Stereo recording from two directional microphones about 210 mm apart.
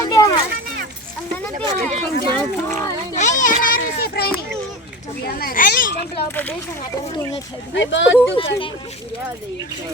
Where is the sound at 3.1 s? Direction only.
35° left (ahead or behind).